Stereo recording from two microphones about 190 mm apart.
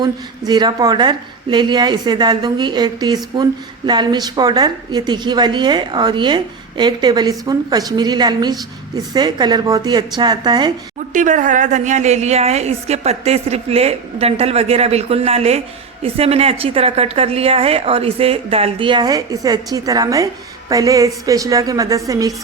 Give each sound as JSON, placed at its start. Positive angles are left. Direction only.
{"t": 0.0, "sound": "a woman's voice", "side_deg": -20}
{"t": 11.1, "sound": "a woman's voice", "side_deg": -40}